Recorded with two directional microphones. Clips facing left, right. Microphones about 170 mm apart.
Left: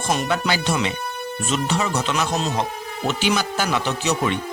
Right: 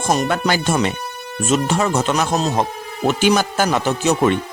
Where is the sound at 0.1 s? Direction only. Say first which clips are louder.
Right 4 dB; 45° right (ahead or behind).